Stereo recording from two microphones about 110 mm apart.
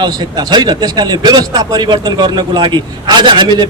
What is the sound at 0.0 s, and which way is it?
A man's voice, 40° right (ahead or behind).